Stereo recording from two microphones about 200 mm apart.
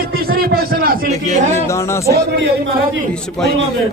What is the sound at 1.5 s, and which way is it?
Speech, 15° left (ahead or behind).